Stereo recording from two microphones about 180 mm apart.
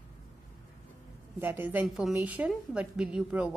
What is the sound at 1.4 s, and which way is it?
A woman's voice, 10° right (ahead or behind).